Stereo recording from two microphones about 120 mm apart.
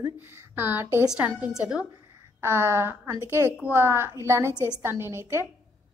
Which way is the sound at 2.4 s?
20° right (ahead or behind).